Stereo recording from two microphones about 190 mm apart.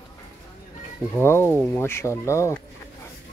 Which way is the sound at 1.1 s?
10° left (ahead or behind).